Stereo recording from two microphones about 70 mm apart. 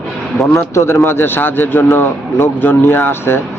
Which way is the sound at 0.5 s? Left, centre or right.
Left.